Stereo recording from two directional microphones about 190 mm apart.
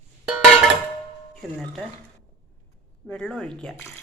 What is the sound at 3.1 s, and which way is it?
Speech, 5° left (ahead or behind).